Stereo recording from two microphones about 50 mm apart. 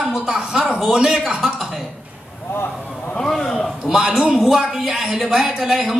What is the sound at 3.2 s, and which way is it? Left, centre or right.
Speech, centre.